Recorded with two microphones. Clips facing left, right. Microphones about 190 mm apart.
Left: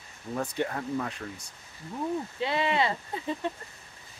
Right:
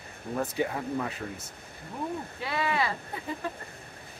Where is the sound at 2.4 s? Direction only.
25° left (ahead or behind).